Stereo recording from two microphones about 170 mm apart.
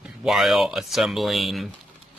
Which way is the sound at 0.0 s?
5° right (ahead or behind).